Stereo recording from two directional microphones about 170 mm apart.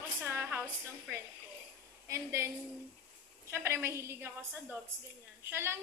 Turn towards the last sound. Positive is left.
turn(degrees=-15)  # may be behind; listen again after turning